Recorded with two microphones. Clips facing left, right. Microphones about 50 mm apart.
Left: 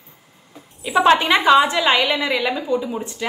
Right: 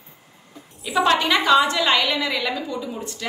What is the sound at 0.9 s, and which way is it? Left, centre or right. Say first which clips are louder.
A woman's voice: left 4 dB; left.